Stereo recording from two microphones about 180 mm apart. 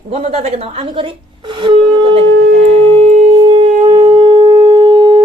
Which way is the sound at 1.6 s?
30° right (ahead or behind).